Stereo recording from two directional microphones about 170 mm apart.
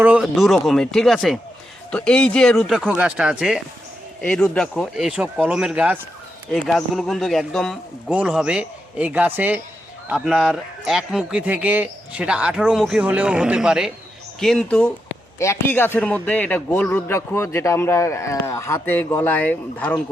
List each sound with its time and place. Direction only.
0.0 s a man's voice: 5° right (ahead or behind)
5.0 s a man's voice: 5° right (ahead or behind); by 20.0 s 10° left (ahead or behind)